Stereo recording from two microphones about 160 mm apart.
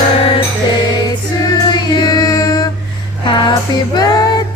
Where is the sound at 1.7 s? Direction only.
25° left (ahead or behind).